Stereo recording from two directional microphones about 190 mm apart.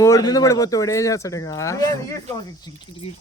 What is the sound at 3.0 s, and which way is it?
Speech, 30° left (ahead or behind).